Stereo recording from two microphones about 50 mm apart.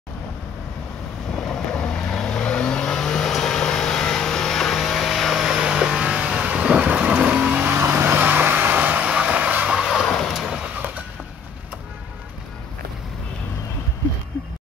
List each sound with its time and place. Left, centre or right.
1.3 s vehicle: centre; by 7.7 s right
7.7 s vehicle: right
9.7 s vehicle: centre
10.0 s vehicle: centre